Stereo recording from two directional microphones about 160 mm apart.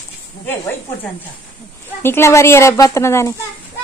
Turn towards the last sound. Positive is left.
turn(degrees=15)  # may be behind; listen again after turning